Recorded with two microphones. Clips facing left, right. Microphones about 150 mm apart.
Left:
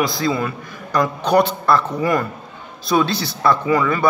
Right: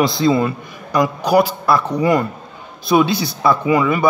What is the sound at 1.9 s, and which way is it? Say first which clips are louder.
A man's voice: right 3 dB; 20° right (ahead or behind).